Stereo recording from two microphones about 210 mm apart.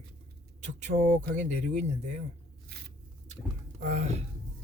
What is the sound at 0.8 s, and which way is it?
Speech, 40° right (ahead or behind).